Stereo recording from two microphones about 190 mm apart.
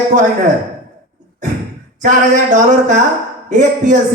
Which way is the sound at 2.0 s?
40° right (ahead or behind).